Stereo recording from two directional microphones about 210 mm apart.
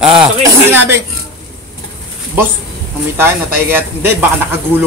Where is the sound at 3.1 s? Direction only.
10° right (ahead or behind).